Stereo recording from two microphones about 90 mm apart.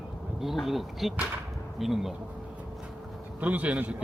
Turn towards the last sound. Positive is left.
turn(degrees=-15)  # may be behind; listen again after turning